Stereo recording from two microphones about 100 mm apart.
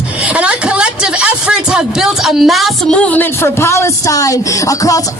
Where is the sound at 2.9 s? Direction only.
15° left (ahead or behind).